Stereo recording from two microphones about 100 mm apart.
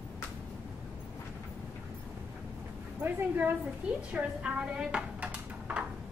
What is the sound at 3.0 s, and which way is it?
A woman's voice, 20° right (ahead or behind).